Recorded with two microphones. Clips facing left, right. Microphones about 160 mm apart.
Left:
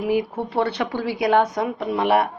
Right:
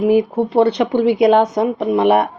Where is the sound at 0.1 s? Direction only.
20° right (ahead or behind).